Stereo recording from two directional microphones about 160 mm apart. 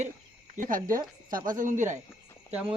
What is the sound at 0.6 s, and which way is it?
Speech, 60° right (ahead or behind).